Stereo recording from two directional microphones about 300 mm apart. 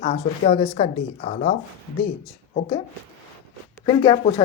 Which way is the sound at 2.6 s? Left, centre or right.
Centre.